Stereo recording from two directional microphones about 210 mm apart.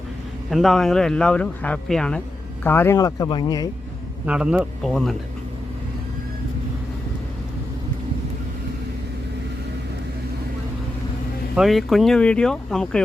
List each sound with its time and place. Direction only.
0.5 s speech: centre (ahead or behind); by 3.7 s 20° left (ahead or behind)
4.3 s speech: 5° right (ahead or behind)
11.5 s speech: centre (ahead or behind)